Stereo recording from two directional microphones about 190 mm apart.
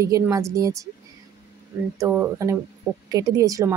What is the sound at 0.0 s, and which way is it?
Speech, 15° right (ahead or behind).